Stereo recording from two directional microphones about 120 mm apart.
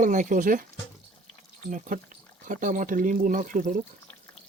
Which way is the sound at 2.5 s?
90° right.